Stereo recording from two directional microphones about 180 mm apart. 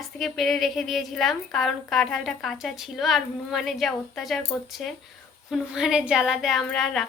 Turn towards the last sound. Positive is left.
turn(degrees=0)  # may be behind; listen again after turning